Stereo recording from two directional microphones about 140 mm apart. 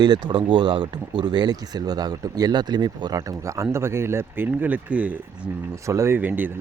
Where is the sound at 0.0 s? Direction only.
30° right (ahead or behind); by 5.1 s 10° right (ahead or behind).